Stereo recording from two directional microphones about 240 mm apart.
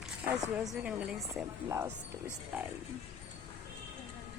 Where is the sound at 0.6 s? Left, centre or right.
Centre.